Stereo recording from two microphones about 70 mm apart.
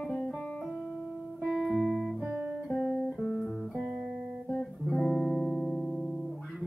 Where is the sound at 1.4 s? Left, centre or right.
Centre.